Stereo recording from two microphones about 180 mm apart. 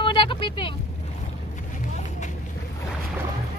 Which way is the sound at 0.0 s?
25° left (ahead or behind).